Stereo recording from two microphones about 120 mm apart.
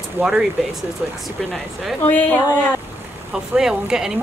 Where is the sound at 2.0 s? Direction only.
15° left (ahead or behind).